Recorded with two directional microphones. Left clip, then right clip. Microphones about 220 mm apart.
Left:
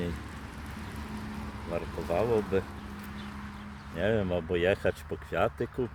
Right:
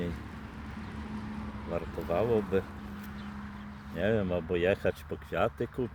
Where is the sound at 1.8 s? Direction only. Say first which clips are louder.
Left 1 dB; 50° left (ahead or behind).